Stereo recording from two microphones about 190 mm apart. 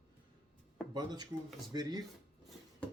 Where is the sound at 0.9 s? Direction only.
20° right (ahead or behind).